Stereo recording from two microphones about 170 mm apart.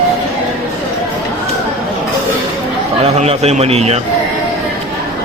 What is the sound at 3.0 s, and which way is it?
A man's voice, 40° right (ahead or behind).